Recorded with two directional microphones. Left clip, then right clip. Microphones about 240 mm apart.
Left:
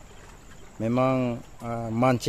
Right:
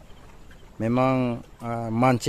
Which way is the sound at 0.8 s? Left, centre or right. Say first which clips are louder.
Right 1 dB; centre.